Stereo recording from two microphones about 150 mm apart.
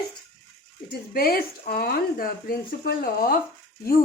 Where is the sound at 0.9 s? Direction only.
90° left.